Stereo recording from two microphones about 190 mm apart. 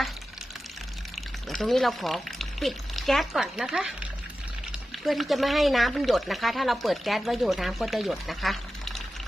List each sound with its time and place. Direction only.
1.5 s speech: centre (ahead or behind)